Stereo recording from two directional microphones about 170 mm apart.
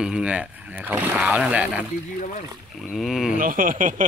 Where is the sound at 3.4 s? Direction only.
55° right (ahead or behind).